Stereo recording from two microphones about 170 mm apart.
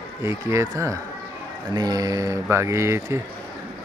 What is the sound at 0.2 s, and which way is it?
Speech, 15° right (ahead or behind).